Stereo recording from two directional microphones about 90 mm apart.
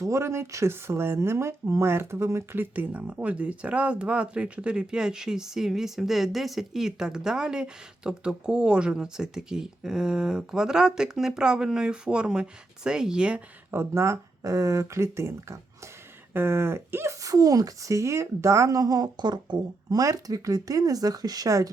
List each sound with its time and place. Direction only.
0.0 s speech: 30° right (ahead or behind); by 13.4 s 10° right (ahead or behind)
13.7 s speech: 30° right (ahead or behind)